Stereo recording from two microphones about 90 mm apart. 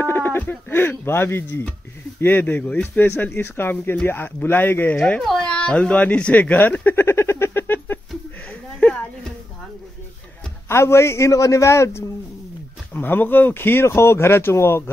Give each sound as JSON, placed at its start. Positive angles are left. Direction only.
{"t": 0.0, "sound": "speech", "side_deg": 25}
{"t": 1.5, "sound": "speech", "side_deg": 15}
{"t": 5.2, "sound": "cat", "side_deg": 5}
{"t": 8.5, "sound": "a sound", "side_deg": 10}
{"t": 10.7, "sound": "a man's voice", "side_deg": 30}